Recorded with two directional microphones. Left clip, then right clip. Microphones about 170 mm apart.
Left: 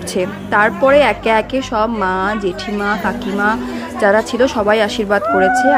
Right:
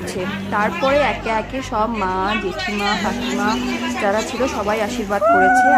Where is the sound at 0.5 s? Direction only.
30° left (ahead or behind).